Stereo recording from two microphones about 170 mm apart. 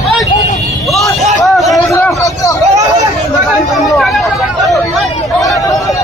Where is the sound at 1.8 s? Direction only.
15° left (ahead or behind).